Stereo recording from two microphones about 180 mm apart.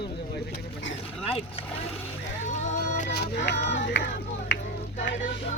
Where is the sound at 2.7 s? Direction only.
40° left (ahead or behind).